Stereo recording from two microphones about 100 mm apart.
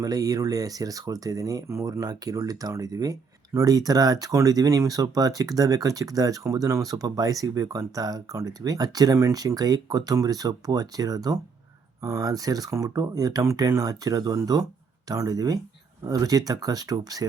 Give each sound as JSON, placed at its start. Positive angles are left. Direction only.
{"t": 0.0, "sound": "speech", "side_deg": -40}